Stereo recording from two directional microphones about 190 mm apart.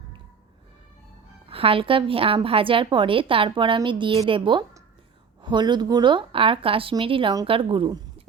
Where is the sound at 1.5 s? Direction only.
30° right (ahead or behind).